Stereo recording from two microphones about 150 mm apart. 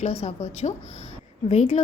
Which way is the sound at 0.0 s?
45° left (ahead or behind).